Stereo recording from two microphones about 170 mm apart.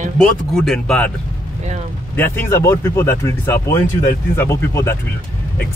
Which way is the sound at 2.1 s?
10° left (ahead or behind).